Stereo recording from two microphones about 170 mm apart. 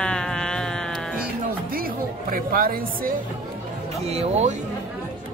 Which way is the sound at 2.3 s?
60° right (ahead or behind).